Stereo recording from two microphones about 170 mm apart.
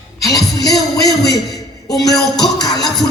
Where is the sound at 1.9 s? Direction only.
Centre (ahead or behind).